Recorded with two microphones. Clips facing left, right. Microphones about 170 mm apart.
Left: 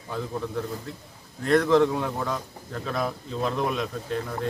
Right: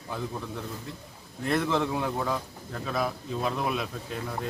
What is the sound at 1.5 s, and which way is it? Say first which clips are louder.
Speech: left 7 dB; 5° right (ahead or behind).